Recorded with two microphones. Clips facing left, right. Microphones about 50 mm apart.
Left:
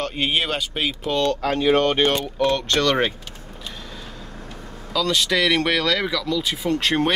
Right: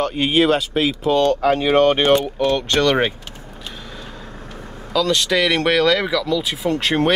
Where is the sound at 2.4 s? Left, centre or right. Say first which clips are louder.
Right 2 dB; centre.